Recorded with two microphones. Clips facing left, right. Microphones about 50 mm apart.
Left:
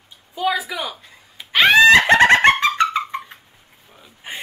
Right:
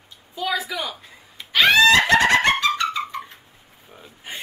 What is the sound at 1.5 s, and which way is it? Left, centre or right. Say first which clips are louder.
Screaming: left 4 dB; left.